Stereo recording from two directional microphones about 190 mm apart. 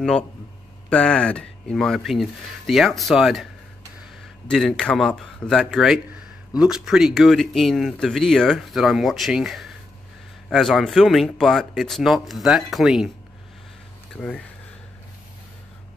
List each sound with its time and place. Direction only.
0.8 s speech: 5° left (ahead or behind)
4.5 s speech: centre (ahead or behind)
14.1 s speech: 5° left (ahead or behind)